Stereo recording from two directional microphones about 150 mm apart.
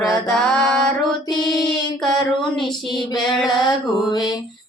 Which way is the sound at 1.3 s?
25° left (ahead or behind).